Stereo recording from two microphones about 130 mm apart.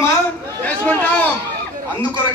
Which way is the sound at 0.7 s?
10° left (ahead or behind).